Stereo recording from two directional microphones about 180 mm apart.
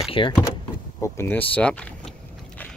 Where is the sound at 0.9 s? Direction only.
10° left (ahead or behind).